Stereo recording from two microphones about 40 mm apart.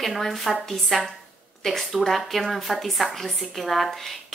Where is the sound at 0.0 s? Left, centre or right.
Centre.